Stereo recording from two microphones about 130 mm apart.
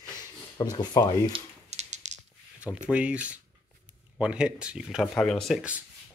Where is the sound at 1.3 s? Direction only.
60° right (ahead or behind).